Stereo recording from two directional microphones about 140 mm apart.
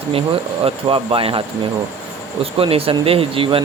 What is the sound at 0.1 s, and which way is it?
Speech, 40° right (ahead or behind).